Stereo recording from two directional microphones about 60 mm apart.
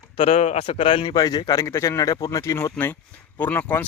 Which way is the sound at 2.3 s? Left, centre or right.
Left.